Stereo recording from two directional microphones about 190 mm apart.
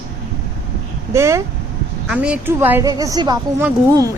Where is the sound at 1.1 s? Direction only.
15° right (ahead or behind).